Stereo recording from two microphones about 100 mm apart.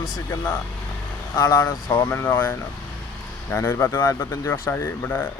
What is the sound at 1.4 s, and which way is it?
Speech, 40° left (ahead or behind).